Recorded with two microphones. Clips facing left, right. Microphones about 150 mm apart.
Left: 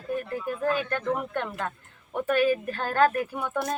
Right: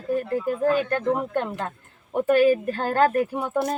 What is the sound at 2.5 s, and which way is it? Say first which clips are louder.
A woman's voice: right 4 dB; 35° right (ahead or behind).